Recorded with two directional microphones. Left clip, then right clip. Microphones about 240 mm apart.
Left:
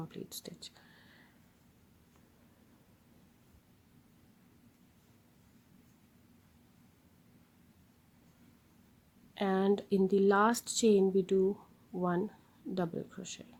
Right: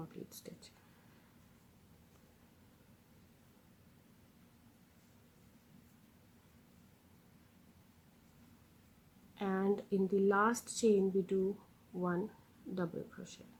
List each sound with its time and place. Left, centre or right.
0.0 s speech: left
9.3 s speech: left